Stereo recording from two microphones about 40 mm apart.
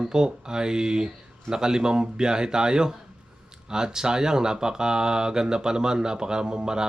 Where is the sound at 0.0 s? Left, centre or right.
Centre.